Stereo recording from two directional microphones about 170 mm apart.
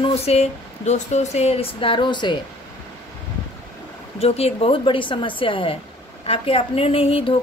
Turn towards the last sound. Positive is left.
turn(degrees=35)  # may be behind; listen again after turning